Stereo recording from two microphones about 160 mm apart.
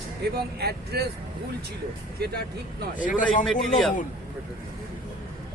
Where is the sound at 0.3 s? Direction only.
80° right.